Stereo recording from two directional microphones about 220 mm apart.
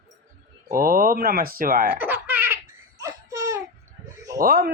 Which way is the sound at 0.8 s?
40° right (ahead or behind).